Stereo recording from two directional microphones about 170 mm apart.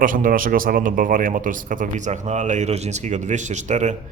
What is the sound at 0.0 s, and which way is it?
A man's voice, 55° right (ahead or behind).